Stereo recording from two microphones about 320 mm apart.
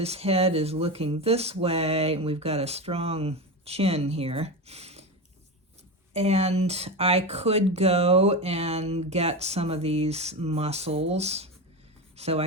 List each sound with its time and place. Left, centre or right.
0.0 s speech: centre
6.1 s speech: centre
12.1 s music: centre